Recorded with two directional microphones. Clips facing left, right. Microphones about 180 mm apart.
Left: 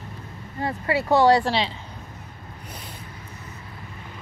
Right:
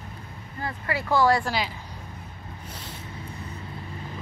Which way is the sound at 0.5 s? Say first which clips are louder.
Left 6 dB; 30° left (ahead or behind).